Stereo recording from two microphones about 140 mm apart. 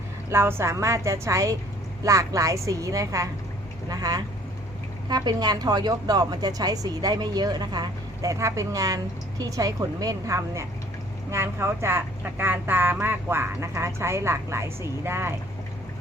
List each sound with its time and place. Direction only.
0.3 s a woman's voice: 15° right (ahead or behind)